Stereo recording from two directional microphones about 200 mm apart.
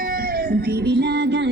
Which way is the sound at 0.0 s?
45° right (ahead or behind).